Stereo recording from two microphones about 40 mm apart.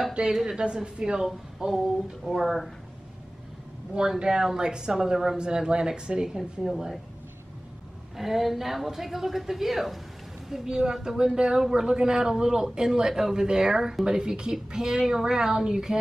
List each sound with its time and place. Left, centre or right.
0.1 s a woman's voice: right
1.7 s a woman's voice: centre
4.2 s speech: centre
6.2 s a woman's voice: centre
8.2 s a woman's voice: centre
10.5 s speech: centre